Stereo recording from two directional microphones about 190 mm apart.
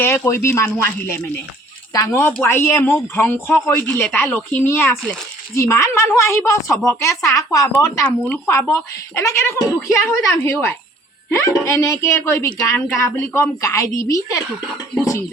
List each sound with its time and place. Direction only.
0.0 s speech: 15° left (ahead or behind)
7.9 s speech: 5° left (ahead or behind)
13.0 s speech: 15° left (ahead or behind)